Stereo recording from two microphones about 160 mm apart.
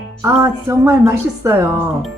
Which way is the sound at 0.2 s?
20° right (ahead or behind).